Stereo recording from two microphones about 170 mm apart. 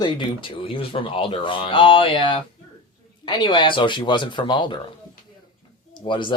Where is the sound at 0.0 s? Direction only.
25° left (ahead or behind).